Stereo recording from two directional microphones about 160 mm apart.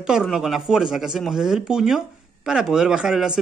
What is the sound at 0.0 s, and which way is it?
Speech, 5° right (ahead or behind).